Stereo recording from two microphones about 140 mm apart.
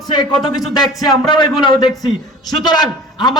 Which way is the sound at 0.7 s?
30° left (ahead or behind).